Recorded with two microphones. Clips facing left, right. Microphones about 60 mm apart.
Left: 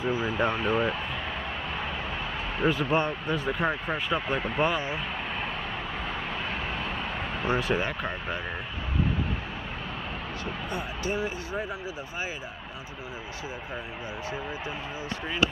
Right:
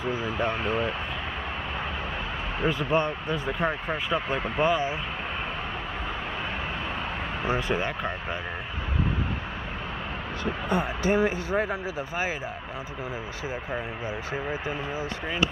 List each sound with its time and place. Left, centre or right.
0.1 s speech: centre
2.6 s speech: centre
7.4 s speech: centre
10.7 s speech: right